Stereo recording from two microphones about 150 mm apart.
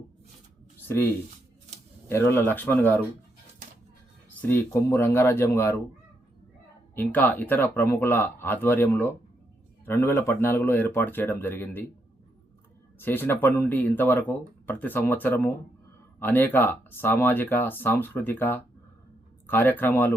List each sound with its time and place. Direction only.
2.0 s speech: 15° left (ahead or behind)
4.4 s speech: 15° left (ahead or behind)
6.9 s speech: 10° left (ahead or behind)
13.0 s speech: 15° left (ahead or behind)